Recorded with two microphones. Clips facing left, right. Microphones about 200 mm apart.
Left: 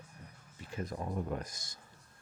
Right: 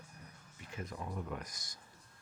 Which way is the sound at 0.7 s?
35° left (ahead or behind).